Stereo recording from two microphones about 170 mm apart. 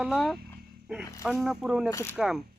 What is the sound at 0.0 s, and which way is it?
Speech, centre (ahead or behind).